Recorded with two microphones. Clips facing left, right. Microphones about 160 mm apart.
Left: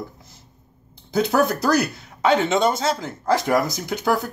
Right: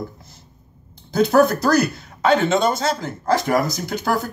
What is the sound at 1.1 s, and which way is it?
Speech, 15° left (ahead or behind).